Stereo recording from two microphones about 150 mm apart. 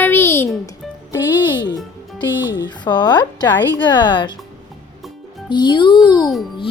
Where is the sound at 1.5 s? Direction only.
30° left (ahead or behind).